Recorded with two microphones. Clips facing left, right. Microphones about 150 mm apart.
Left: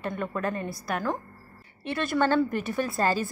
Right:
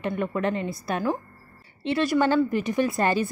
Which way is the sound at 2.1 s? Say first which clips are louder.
Right 1 dB; 10° right (ahead or behind).